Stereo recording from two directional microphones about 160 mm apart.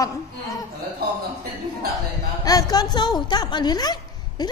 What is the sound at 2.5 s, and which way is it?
A woman's voice, 25° left (ahead or behind).